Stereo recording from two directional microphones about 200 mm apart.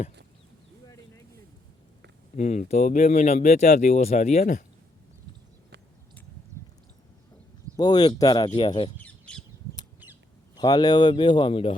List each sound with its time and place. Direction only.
2.3 s speech: 35° left (ahead or behind)
7.8 s speech: 20° left (ahead or behind)
9.0 s bird: 5° left (ahead or behind)
10.5 s speech: 20° left (ahead or behind)